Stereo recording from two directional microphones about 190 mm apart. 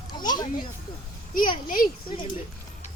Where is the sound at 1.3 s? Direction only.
45° left (ahead or behind).